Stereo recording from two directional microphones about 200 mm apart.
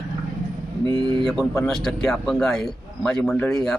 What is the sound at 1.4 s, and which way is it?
A man's voice, centre (ahead or behind).